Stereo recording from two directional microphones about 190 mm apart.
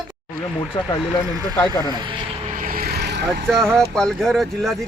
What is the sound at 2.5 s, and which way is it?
Vehicle, 50° right (ahead or behind).